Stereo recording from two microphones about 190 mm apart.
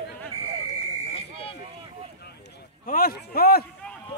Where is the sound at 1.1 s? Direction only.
30° left (ahead or behind).